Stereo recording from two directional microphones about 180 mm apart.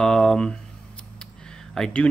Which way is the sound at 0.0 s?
5° left (ahead or behind).